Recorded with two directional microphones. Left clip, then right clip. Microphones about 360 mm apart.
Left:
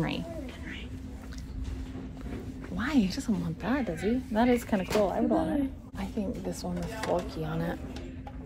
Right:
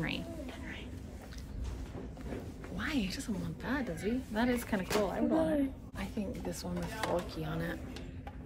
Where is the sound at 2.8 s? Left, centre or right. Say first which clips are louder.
Left 7 dB; centre.